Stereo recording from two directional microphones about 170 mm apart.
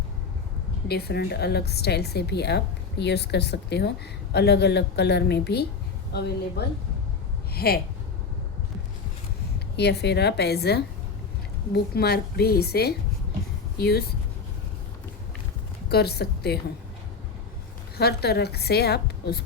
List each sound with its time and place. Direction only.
0.9 s a woman's voice: 70° left (ahead or behind)
7.5 s speech: 65° left (ahead or behind)
9.7 s a woman's voice: 80° left
15.9 s a woman's voice: 70° left (ahead or behind)
17.9 s a woman's voice: 70° left (ahead or behind)